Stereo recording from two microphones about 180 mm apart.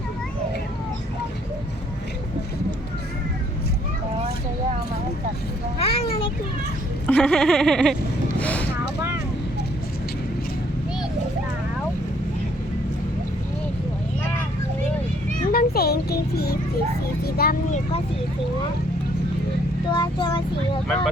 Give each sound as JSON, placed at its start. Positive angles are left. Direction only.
{"t": 5.8, "sound": "a sound", "side_deg": 30}
{"t": 7.1, "sound": "a sound", "side_deg": 5}
{"t": 8.4, "sound": "vehicle", "side_deg": 10}
{"t": 15.5, "sound": "music", "side_deg": 60}
{"t": 17.3, "sound": "vehicle", "side_deg": 55}
{"t": 19.9, "sound": "child singing", "side_deg": 25}
{"t": 20.8, "sound": "vehicle", "side_deg": 5}